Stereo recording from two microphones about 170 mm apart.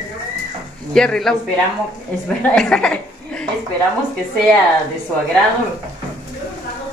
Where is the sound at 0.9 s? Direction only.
5° left (ahead or behind).